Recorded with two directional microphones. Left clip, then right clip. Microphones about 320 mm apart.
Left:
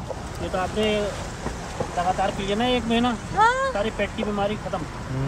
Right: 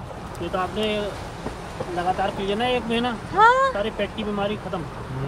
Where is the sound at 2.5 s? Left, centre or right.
Right.